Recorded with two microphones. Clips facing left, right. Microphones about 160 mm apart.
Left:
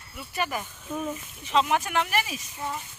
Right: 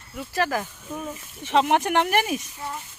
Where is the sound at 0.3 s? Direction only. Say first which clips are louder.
Right 5 dB; 90° right.